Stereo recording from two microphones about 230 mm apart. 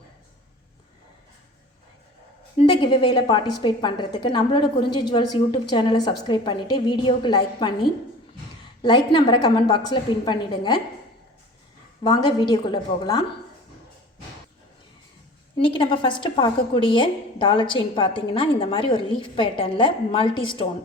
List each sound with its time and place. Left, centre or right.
2.6 s a woman's voice: left
9.1 s a woman's voice: centre
12.0 s a woman's voice: centre
15.5 s a woman's voice: left